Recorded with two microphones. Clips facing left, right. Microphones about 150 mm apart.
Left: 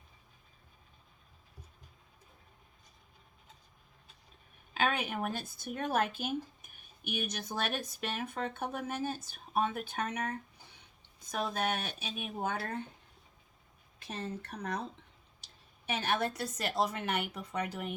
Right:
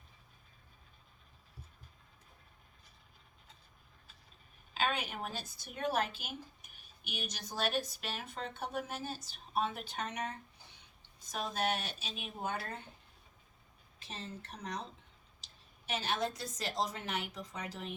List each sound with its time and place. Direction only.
4.7 s speech: 55° left (ahead or behind)
14.0 s a woman's voice: 55° left (ahead or behind)
15.9 s a woman's voice: 60° left (ahead or behind)